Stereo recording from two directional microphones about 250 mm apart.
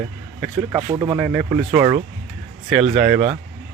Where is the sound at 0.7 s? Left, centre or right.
Centre.